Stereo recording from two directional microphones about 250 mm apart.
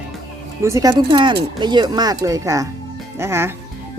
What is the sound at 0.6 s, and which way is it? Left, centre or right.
Speech, centre.